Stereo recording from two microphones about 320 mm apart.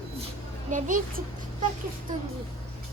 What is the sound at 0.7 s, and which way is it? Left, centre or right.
Speech, right.